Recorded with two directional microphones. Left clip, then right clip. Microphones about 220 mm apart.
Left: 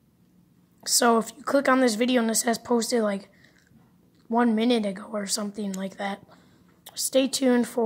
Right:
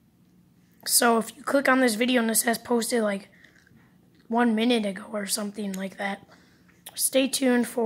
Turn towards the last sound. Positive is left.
turn(degrees=0)  # may be behind; listen again after turning